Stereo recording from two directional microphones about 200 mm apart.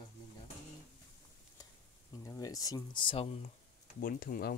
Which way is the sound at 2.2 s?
20° left (ahead or behind).